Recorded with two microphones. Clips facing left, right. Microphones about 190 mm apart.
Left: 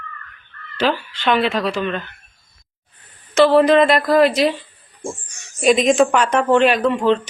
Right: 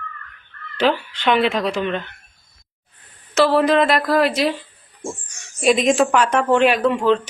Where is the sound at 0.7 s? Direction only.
20° right (ahead or behind).